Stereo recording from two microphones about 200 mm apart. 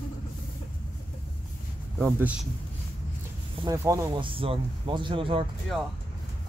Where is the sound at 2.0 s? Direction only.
10° right (ahead or behind).